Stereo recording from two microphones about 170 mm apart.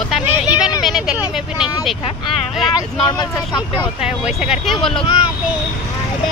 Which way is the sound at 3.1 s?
25° left (ahead or behind).